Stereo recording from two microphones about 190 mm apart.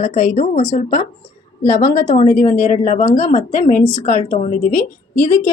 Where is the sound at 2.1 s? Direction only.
45° left (ahead or behind).